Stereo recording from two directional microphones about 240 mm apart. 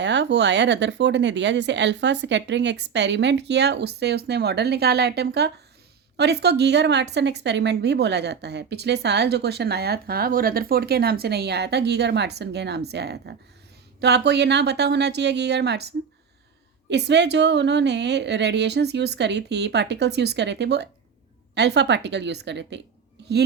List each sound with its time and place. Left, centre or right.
0.0 s a woman's voice: right
16.9 s a woman's voice: right